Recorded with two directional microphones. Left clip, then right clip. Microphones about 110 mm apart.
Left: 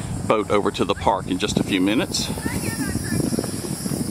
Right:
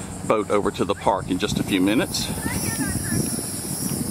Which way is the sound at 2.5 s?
45° left (ahead or behind).